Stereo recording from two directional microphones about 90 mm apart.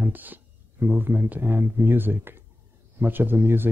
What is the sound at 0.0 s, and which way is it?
Speech, 20° right (ahead or behind).